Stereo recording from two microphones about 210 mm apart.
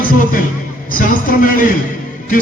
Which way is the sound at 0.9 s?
40° left (ahead or behind).